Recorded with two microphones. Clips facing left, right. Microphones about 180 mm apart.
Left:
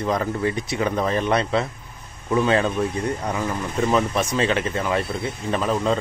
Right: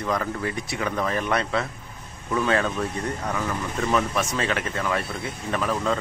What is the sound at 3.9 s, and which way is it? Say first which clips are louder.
Speech: left 2 dB; 20° left (ahead or behind).